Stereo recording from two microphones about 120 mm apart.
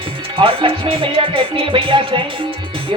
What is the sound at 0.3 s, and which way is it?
Music, 45° right (ahead or behind).